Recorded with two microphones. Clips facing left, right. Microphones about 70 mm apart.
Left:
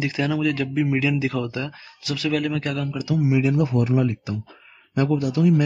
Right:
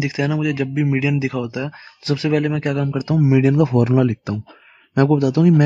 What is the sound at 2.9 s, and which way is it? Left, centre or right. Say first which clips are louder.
Speech: right 4 dB; right.